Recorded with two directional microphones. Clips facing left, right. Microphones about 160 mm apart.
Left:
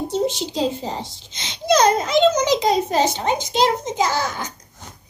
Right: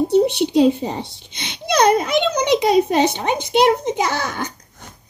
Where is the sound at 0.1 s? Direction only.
60° right (ahead or behind).